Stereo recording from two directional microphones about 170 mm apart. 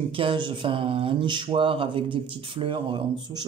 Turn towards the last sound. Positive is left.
turn(degrees=-30)  # may be behind; listen again after turning